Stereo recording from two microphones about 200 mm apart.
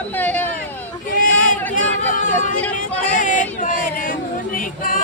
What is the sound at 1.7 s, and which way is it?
Chatter, 40° left (ahead or behind).